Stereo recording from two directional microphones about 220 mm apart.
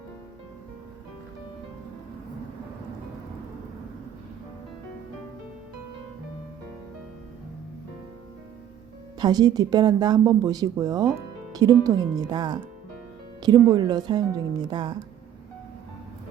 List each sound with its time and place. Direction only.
9.1 s speech: 20° right (ahead or behind)